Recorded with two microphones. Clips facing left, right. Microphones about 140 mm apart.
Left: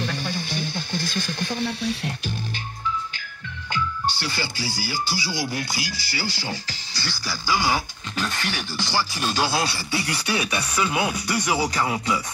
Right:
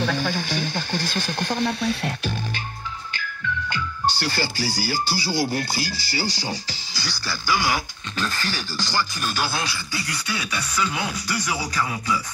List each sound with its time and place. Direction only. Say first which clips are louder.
0.2 s speech: right 3 dB; 90° right
4.0 s speech: right 3 dB; 35° right (ahead or behind)
7.4 s speech: even; 20° left (ahead or behind)